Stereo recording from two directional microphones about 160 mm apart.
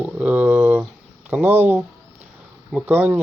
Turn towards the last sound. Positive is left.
turn(degrees=-10)  # may be behind; listen again after turning